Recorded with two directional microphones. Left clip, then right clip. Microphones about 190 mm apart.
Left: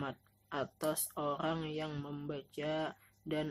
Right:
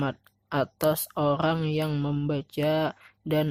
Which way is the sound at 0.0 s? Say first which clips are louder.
Right 11 dB; 45° right (ahead or behind).